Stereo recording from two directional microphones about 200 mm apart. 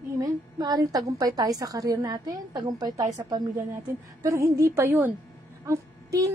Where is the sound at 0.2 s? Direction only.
20° right (ahead or behind).